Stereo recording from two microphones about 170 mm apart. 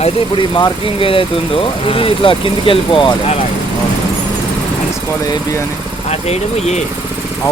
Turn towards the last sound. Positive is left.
turn(degrees=40)  # may be behind; listen again after turning